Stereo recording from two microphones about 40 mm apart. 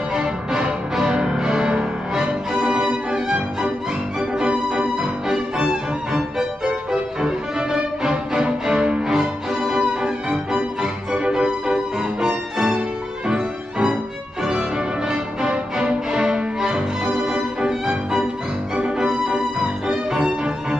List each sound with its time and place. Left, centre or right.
0.1 s music: centre